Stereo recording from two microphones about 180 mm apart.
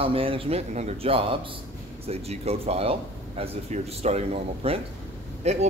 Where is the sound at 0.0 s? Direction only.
30° right (ahead or behind).